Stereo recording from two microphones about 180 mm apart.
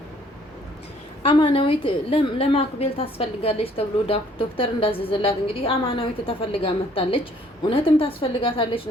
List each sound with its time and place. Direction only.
1.2 s a woman's voice: 30° left (ahead or behind)